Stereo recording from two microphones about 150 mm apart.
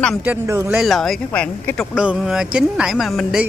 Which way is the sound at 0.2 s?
15° right (ahead or behind).